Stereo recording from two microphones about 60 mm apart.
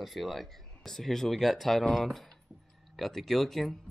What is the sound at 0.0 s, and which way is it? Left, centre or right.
Speech, centre.